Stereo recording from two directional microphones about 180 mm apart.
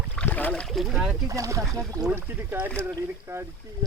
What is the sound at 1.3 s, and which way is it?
Speech, 20° right (ahead or behind).